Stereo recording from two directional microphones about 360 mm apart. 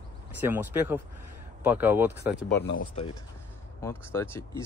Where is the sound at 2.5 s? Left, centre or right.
Left.